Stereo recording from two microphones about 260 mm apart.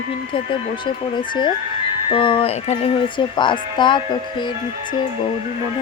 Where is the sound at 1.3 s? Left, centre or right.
Centre.